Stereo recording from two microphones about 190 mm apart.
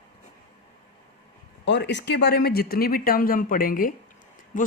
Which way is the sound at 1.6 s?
65° left (ahead or behind).